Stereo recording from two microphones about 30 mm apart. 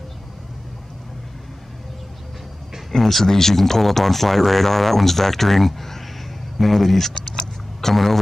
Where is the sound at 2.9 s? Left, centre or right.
Centre.